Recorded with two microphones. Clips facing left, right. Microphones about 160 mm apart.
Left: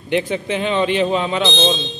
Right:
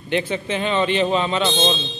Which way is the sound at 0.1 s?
15° left (ahead or behind).